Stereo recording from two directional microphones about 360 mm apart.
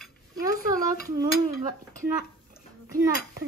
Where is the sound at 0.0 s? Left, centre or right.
Centre.